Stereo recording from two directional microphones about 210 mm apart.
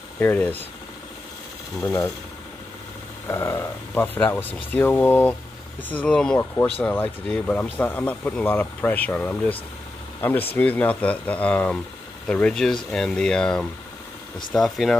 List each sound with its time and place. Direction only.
0.2 s speech: 10° left (ahead or behind)
1.8 s speech: 5° left (ahead or behind)
3.3 s speech: 10° left (ahead or behind)